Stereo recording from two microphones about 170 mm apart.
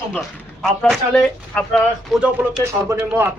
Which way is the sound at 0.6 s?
5° left (ahead or behind).